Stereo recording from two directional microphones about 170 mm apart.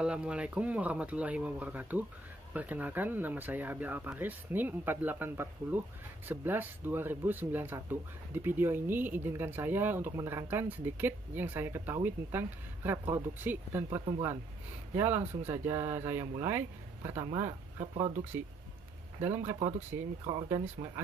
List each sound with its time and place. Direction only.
0.0 s speech: 5° right (ahead or behind)
15.0 s speech: 10° right (ahead or behind)
19.2 s speech: 10° right (ahead or behind)